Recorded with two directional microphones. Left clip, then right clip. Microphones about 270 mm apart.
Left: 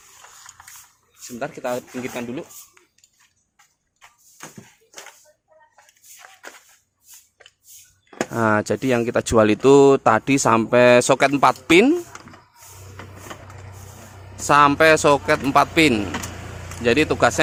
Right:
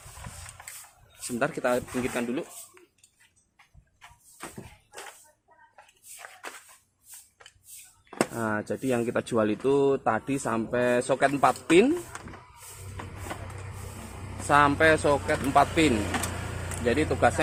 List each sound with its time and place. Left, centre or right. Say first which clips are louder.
1.2 s speech: right 1 dB; centre
8.3 s speech: left 11 dB; left
14.4 s speech: left 7 dB; left